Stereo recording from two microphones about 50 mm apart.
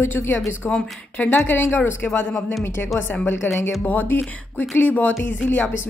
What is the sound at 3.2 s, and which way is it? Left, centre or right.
Speech, left.